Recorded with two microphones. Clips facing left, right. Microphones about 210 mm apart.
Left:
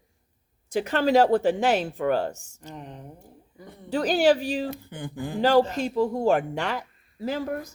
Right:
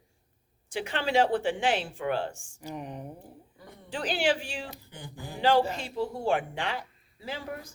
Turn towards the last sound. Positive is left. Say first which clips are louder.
# left 9 dB
turn(degrees=45)  # may be behind; listen again after turning